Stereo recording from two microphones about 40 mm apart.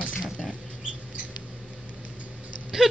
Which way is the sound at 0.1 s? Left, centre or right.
Centre.